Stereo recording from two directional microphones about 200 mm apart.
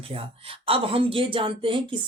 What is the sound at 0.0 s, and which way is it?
Speech, 30° right (ahead or behind).